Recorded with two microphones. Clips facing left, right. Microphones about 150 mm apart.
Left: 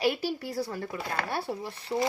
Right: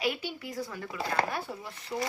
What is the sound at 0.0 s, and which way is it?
Speech, 35° left (ahead or behind).